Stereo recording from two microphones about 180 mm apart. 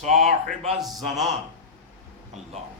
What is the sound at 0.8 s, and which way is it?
Speech, centre (ahead or behind).